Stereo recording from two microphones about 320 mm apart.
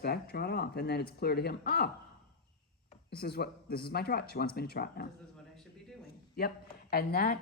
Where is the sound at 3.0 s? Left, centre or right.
Left.